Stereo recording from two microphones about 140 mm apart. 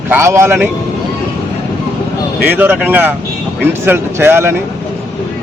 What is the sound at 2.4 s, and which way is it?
A man's voice, 15° right (ahead or behind).